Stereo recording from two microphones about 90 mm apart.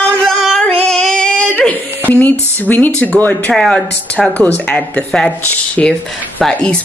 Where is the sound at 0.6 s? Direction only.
10° left (ahead or behind).